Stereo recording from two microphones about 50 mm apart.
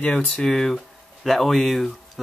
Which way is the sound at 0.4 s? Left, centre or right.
Centre.